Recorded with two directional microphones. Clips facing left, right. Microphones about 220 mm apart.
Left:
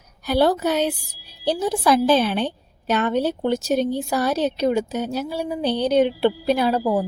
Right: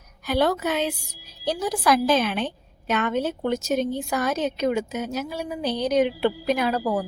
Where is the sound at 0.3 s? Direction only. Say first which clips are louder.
Left 4 dB; 35° left (ahead or behind).